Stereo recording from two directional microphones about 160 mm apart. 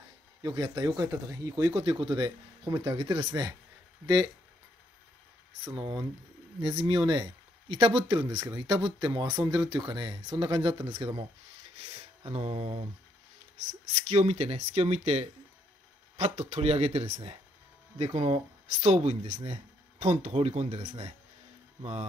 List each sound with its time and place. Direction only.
0.4 s speech: 30° right (ahead or behind)
5.6 s speech: 30° right (ahead or behind)
12.3 s speech: 40° right (ahead or behind)
14.0 s speech: 45° right (ahead or behind)